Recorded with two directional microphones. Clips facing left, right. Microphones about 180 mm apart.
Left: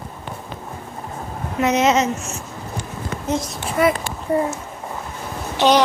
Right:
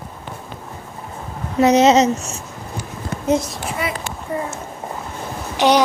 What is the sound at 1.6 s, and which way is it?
Speech, 35° right (ahead or behind).